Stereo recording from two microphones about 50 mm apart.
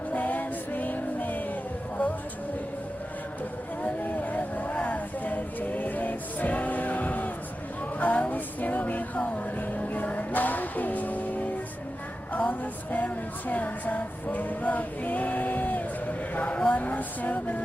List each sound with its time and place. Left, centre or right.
0.1 s music: left
3.8 s vehicle: left
4.7 s music: left
7.9 s a sound: left
8.3 s music: left
12.3 s a sound: left
13.5 s music: left
14.3 s male singing: left
16.6 s a sound: left